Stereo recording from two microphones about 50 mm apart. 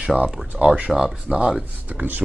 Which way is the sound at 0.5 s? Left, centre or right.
Centre.